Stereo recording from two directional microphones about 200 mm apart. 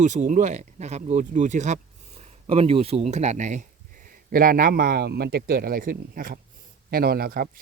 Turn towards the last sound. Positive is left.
turn(degrees=-50)  # may be behind; listen again after turning